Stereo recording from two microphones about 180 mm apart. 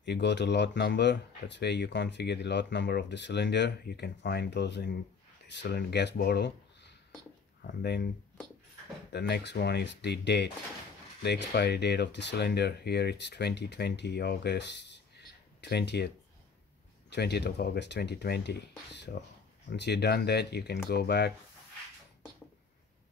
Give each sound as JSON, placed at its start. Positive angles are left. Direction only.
{"t": 0.0, "sound": "speech", "side_deg": 70}
{"t": 9.1, "sound": "speech", "side_deg": 70}
{"t": 17.1, "sound": "speech", "side_deg": 65}